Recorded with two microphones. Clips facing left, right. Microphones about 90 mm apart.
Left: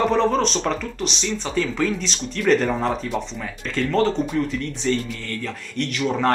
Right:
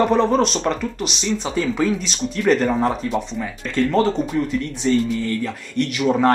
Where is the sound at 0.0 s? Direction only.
5° right (ahead or behind).